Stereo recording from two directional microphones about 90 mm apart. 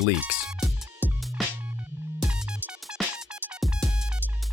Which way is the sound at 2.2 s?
10° right (ahead or behind).